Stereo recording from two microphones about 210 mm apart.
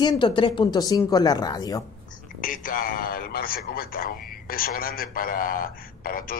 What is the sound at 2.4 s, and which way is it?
A man's voice, 40° left (ahead or behind).